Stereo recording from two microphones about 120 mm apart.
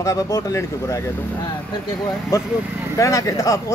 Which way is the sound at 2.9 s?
25° left (ahead or behind).